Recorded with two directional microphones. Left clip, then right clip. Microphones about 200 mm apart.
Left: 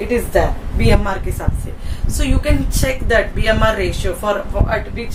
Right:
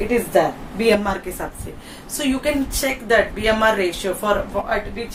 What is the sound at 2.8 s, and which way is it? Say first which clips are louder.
Speech: left 2 dB; 10° right (ahead or behind).